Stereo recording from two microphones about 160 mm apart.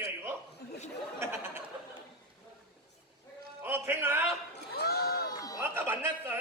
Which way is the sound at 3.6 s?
15° right (ahead or behind).